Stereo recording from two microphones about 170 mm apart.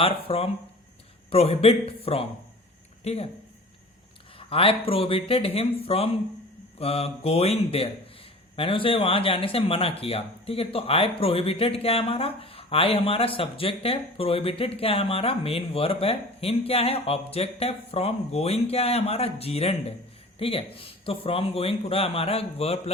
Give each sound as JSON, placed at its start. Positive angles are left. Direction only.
{"t": 0.0, "sound": "speech", "side_deg": 35}
{"t": 3.0, "sound": "speech", "side_deg": 40}
{"t": 4.4, "sound": "speech", "side_deg": 35}